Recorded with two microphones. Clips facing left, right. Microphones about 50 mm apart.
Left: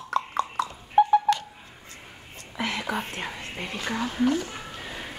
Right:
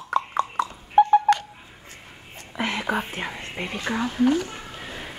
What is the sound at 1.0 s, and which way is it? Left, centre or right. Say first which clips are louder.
Telephone dialing: right 3 dB; centre.